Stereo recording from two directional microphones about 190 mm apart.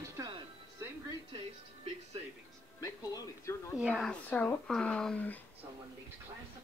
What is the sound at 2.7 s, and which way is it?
Speech, 15° left (ahead or behind).